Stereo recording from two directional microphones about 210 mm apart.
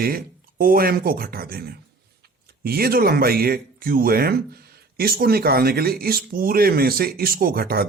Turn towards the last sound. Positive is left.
turn(degrees=-45)  # may be behind; listen again after turning